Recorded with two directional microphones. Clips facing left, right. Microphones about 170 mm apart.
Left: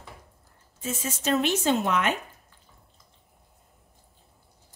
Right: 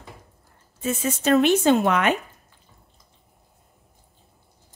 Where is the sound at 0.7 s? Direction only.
60° right (ahead or behind).